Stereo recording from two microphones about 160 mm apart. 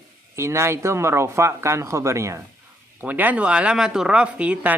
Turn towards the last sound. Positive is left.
turn(degrees=-10)  # may be behind; listen again after turning